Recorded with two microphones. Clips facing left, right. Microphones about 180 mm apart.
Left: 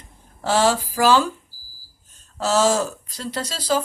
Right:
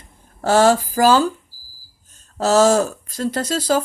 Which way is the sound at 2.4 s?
45° right (ahead or behind).